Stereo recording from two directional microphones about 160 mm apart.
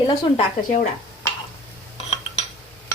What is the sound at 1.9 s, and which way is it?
Cutlery, 40° left (ahead or behind).